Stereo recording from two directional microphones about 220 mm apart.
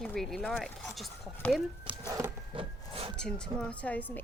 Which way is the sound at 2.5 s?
25° right (ahead or behind).